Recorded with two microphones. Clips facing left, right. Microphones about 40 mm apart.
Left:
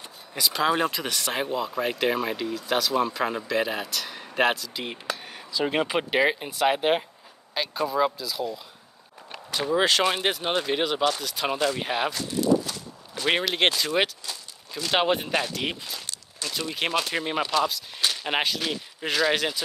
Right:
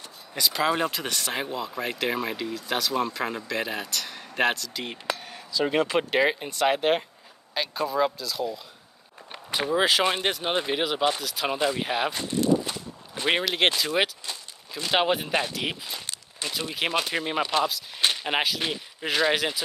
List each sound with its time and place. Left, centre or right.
0.3 s speech: centre
9.7 s speech: centre
11.8 s speech: centre
12.1 s a sound: right
13.3 s speech: centre
14.2 s speech: centre
16.1 s a sound: right
16.5 s speech: centre